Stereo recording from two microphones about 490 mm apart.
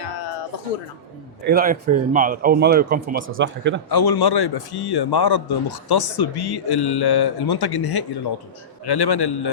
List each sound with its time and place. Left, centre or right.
1.5 s speech: centre
3.8 s a man's voice: left